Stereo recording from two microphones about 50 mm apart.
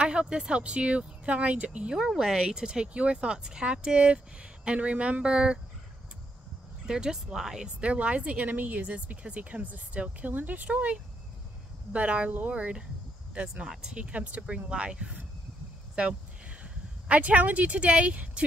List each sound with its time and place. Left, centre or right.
0.0 s speech: centre
2.0 s speech: centre
6.9 s speech: centre
7.8 s speech: right